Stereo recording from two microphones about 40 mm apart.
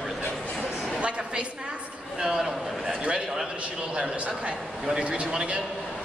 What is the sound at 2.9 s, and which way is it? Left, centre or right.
A woman's voice, right.